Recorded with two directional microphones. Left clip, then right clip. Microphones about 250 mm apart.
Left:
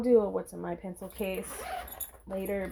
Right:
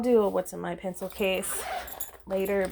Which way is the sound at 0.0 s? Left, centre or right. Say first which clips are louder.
Right 2 dB; right.